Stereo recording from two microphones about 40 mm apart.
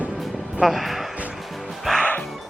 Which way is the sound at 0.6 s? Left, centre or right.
Centre.